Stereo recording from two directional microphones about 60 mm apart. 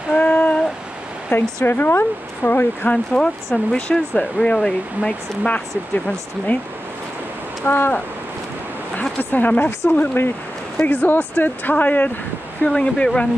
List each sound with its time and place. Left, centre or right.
0.1 s a sound: left
1.3 s speech: left
2.9 s speech: centre
7.6 s speech: left
9.2 s speech: left
12.6 s speech: centre